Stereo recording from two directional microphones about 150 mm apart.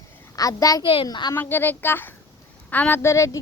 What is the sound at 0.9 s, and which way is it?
Speech, 35° left (ahead or behind).